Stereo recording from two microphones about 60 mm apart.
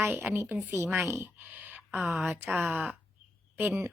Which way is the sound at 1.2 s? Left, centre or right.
Right.